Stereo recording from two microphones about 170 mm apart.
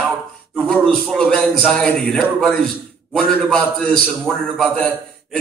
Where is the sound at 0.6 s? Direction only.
Centre (ahead or behind).